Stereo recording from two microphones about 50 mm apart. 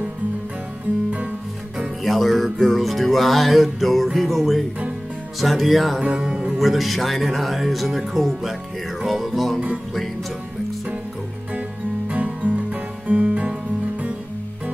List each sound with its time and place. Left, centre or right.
2.0 s music: centre
5.9 s music: centre
6.6 s music: centre
12.1 s music: right